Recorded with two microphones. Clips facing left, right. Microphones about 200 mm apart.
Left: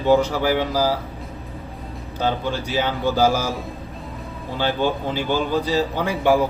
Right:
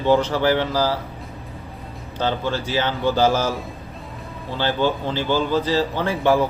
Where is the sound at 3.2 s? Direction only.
10° left (ahead or behind).